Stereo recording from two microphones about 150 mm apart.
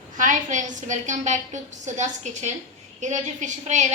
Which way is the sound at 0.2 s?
55° right (ahead or behind).